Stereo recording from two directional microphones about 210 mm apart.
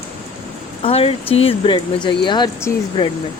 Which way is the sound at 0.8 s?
25° left (ahead or behind).